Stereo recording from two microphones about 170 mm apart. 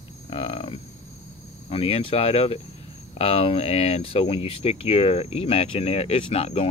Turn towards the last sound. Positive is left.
turn(degrees=35)  # may be behind; listen again after turning